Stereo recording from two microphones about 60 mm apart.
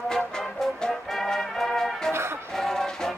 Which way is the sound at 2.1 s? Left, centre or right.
Right.